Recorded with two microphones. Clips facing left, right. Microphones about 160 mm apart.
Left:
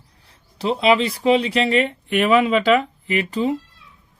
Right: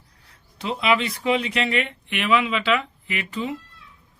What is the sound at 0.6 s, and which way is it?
Speech, 30° left (ahead or behind).